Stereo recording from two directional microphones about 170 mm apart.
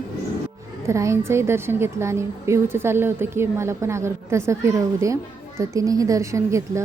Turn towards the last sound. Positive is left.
turn(degrees=-20)  # may be behind; listen again after turning